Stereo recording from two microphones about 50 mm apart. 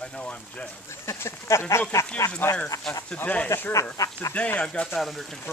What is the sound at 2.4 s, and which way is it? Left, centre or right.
Speech, left.